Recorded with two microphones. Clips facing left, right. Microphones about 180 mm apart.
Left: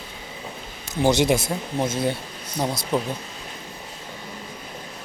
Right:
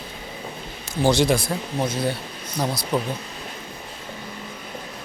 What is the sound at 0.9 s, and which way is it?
Speech, 20° left (ahead or behind).